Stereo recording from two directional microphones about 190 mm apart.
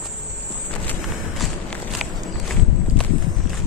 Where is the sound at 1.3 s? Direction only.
Centre (ahead or behind).